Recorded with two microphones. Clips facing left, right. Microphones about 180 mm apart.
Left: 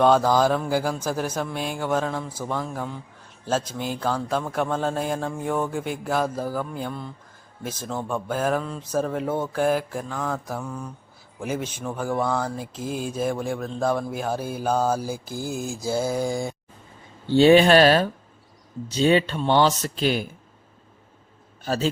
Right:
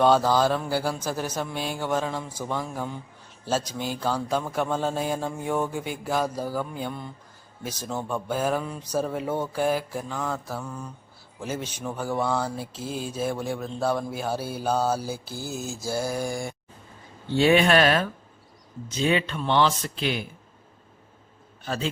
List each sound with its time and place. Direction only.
0.0 s a man's voice: 5° right (ahead or behind)
0.3 s mantra: 10° left (ahead or behind)
1.4 s a man's voice: centre (ahead or behind)
2.0 s a man's voice: 5° right (ahead or behind)
3.6 s mantra: 10° left (ahead or behind)
4.0 s a man's voice: 5° right (ahead or behind)
11.4 s mantra: 10° left (ahead or behind)
11.8 s a man's voice: 5° right (ahead or behind)
12.8 s mantra: 10° left (ahead or behind)
13.5 s a man's voice: 5° right (ahead or behind)
14.4 s mantra: 10° left (ahead or behind)
17.2 s speech: 30° left (ahead or behind)
21.6 s a man's voice: 40° left (ahead or behind)